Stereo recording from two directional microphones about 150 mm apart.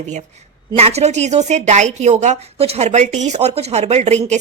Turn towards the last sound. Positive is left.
turn(degrees=-50)  # may be behind; listen again after turning